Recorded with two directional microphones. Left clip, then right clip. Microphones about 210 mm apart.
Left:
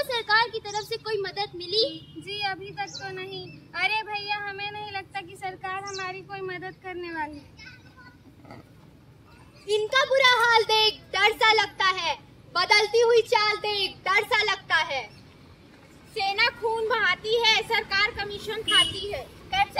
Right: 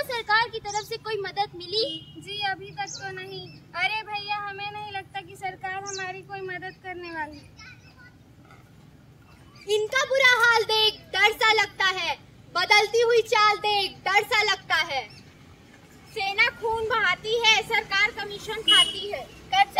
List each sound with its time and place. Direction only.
0.0 s speech: 5° left (ahead or behind)
9.7 s a child's voice: 15° right (ahead or behind)
16.2 s a child's voice: 5° left (ahead or behind)
19.5 s child singing: 20° right (ahead or behind)